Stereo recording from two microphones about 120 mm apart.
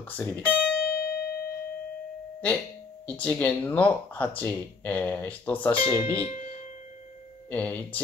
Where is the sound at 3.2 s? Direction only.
15° left (ahead or behind).